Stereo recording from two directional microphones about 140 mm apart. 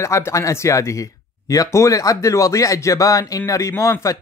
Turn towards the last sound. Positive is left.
turn(degrees=20)  # may be behind; listen again after turning